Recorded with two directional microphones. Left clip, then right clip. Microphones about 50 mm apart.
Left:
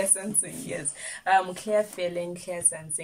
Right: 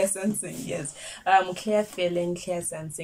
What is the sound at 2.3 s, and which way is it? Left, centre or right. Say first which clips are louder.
Speech: right 2 dB; right.